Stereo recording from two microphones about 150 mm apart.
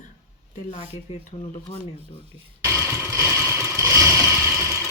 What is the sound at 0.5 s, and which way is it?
Speech, 55° left (ahead or behind).